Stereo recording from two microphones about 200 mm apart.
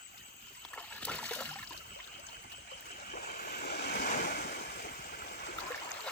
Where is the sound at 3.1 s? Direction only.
45° left (ahead or behind).